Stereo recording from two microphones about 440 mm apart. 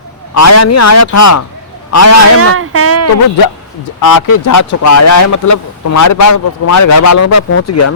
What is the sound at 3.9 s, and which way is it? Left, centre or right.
Speech, left.